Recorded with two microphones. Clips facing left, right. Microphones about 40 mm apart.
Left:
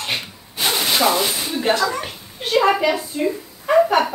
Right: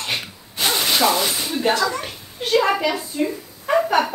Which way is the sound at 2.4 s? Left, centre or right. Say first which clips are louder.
Left 2 dB; centre.